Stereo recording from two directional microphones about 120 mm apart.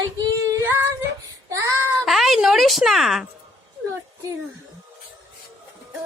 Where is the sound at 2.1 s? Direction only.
Centre (ahead or behind).